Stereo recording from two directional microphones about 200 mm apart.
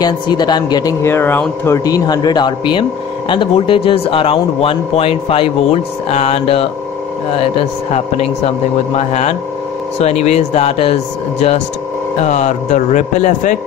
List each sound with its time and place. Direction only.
0.0 s speech: 20° left (ahead or behind)
8.9 s speech: 35° left (ahead or behind)
12.2 s speech: 35° left (ahead or behind)